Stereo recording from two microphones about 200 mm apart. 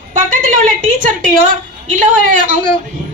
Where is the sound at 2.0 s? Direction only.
40° right (ahead or behind).